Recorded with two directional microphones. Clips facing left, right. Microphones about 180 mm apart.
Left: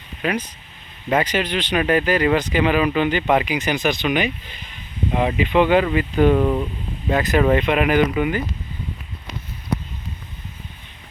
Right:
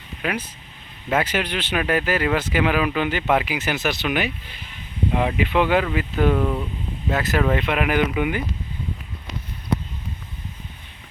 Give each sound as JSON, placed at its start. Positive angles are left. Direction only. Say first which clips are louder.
{"t": 0.2, "sound": "speech", "louder": "left 3 dB", "side_deg": -5}
{"t": 6.4, "sound": "speech", "louder": "left 4 dB", "side_deg": 15}
{"t": 7.1, "sound": "speech", "louder": "left 4 dB", "side_deg": 0}